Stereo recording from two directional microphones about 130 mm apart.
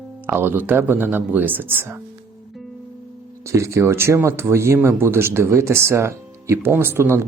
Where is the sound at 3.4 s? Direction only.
20° right (ahead or behind).